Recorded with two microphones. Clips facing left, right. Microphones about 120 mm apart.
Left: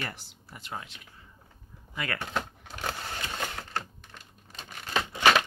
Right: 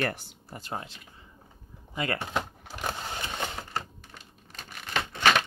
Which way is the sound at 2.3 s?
10° right (ahead or behind).